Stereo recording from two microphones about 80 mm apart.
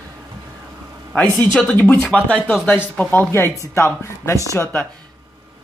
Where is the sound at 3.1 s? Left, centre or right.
Left.